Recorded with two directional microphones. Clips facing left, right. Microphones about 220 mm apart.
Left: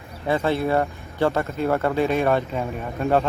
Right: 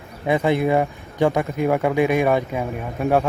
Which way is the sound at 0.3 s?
15° right (ahead or behind).